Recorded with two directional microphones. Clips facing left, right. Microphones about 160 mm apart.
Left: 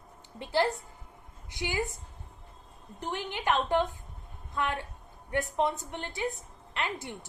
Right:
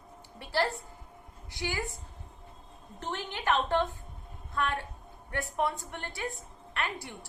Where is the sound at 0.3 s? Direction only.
20° left (ahead or behind).